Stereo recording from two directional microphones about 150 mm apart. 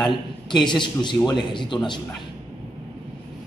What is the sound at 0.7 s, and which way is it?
A man's voice, 30° left (ahead or behind).